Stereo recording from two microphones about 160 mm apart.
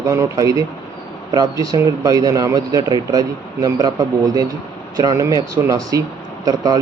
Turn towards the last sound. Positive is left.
turn(degrees=-20)  # may be behind; listen again after turning